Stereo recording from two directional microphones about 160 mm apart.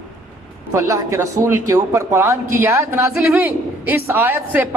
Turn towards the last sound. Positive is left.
turn(degrees=-10)  # may be behind; listen again after turning